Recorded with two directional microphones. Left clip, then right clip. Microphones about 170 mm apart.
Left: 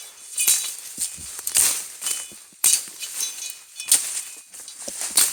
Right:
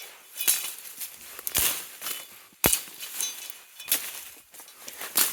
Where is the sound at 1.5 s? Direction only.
30° right (ahead or behind).